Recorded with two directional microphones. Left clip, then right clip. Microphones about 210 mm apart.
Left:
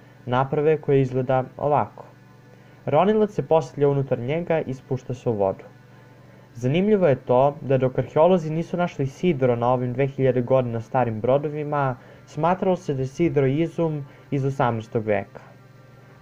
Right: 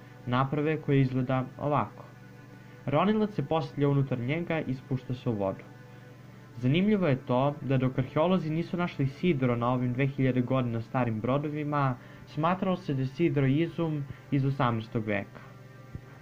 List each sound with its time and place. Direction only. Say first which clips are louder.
0.3 s speech: left 8 dB; 45° left (ahead or behind)
6.6 s speech: left 8 dB; 45° left (ahead or behind)